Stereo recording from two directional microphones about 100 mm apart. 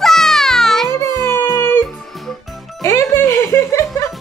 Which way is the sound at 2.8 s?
30° left (ahead or behind).